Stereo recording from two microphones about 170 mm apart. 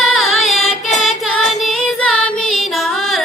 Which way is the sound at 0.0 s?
Centre (ahead or behind).